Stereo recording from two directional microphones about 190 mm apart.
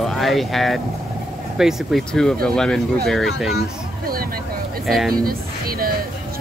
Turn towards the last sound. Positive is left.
turn(degrees=-50)  # may be behind; listen again after turning